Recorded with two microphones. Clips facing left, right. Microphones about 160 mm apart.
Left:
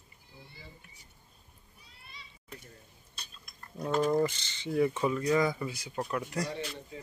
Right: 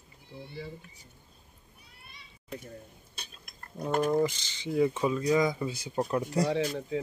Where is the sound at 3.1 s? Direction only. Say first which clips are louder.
Right 3 dB; 60° right (ahead or behind).